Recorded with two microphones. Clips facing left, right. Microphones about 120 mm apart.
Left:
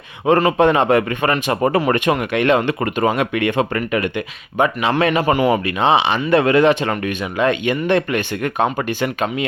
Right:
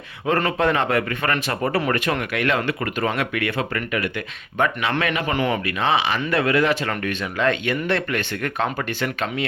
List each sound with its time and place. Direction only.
0.3 s speech: 20° left (ahead or behind)
5.3 s speech: 10° left (ahead or behind)
5.8 s speech: 25° left (ahead or behind)